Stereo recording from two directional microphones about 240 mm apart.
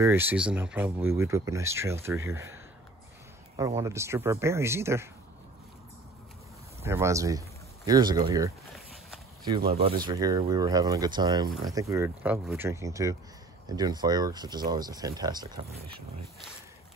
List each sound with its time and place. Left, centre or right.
0.0 s speech: centre
3.5 s speech: centre
6.8 s speech: centre
10.0 s speech: centre